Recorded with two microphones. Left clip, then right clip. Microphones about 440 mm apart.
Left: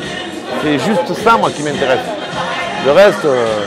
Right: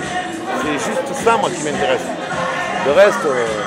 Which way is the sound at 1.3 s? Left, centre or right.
Left.